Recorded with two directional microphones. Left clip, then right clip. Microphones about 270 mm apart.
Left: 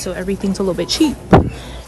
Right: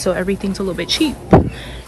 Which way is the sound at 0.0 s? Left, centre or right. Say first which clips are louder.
Right 4 dB; centre.